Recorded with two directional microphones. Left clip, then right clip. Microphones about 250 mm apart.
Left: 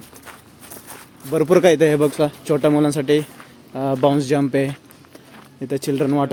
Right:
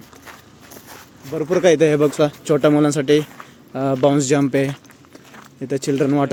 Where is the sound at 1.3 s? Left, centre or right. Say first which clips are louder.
Left 5 dB; left.